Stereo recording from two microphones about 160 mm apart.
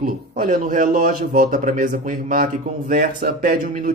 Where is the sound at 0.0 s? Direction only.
55° right (ahead or behind).